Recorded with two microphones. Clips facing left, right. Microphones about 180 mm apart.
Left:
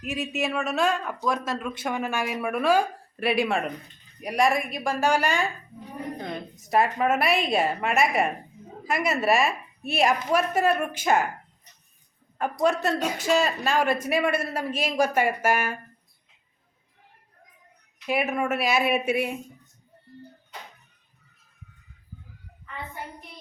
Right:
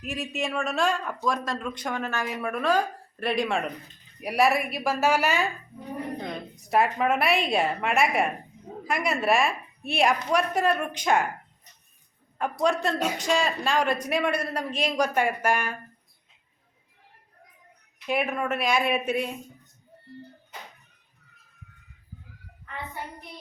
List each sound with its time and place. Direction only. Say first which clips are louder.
0.0 s a man's voice: left 2 dB; centre (ahead or behind)
6.6 s a man's voice: left 1 dB; centre (ahead or behind)
12.6 s a man's voice: left 1 dB; 5° left (ahead or behind)
18.0 s a man's voice: left 1 dB; 5° left (ahead or behind)